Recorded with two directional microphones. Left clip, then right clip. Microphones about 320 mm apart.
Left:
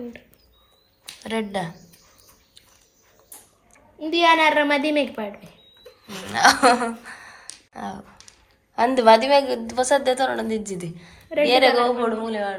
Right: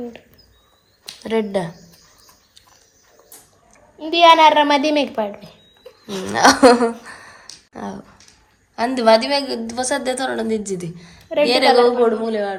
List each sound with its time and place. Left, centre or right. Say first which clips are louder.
1.2 s a woman's voice: right 6 dB; centre
4.1 s a woman's voice: right 6 dB; right
6.1 s a woman's voice: right 3 dB; centre
8.7 s a woman's voice: even; centre